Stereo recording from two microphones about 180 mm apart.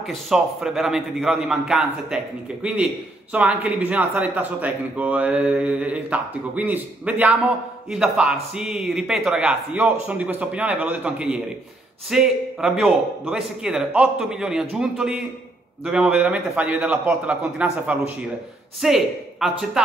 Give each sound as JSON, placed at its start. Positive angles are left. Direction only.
{"t": 0.0, "sound": "a man's voice", "side_deg": 0}